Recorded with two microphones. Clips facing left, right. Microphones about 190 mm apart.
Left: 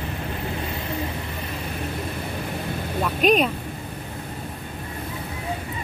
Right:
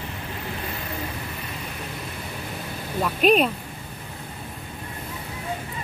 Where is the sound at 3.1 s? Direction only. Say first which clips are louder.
Right 1 dB; centre (ahead or behind).